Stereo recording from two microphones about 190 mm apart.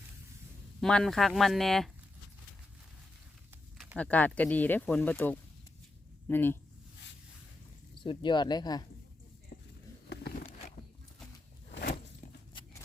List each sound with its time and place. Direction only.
0.8 s speech: 5° left (ahead or behind)
3.9 s speech: 5° left (ahead or behind)
7.9 s speech: 25° left (ahead or behind)
11.7 s a sound: 50° left (ahead or behind)